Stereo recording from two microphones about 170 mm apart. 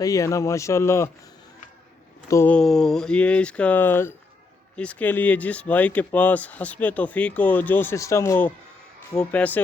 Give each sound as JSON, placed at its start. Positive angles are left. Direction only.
{"t": 0.0, "sound": "speech", "side_deg": 20}
{"t": 2.3, "sound": "speech", "side_deg": 10}